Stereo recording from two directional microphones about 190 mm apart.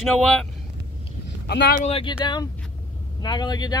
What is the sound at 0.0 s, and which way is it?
Speech, 5° left (ahead or behind).